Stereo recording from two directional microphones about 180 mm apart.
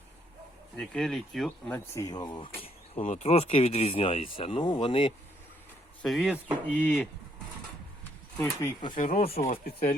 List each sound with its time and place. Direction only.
0.8 s speech: centre (ahead or behind); by 2.5 s 25° left (ahead or behind)
2.6 s speech: 40° left (ahead or behind)
6.0 s speech: centre (ahead or behind)
9.0 s speech: 50° left (ahead or behind)
9.2 s speech: 35° left (ahead or behind)
9.5 s speech: 55° left (ahead or behind)